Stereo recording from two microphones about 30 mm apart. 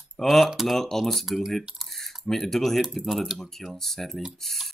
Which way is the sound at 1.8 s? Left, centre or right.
Centre.